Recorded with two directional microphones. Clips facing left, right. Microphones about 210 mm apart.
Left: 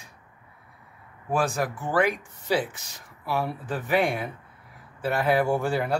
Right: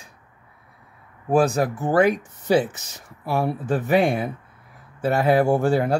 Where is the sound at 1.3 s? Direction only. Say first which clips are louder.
Right 7 dB; 40° right (ahead or behind).